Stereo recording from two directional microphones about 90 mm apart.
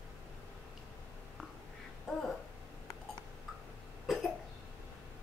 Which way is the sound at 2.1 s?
Centre (ahead or behind).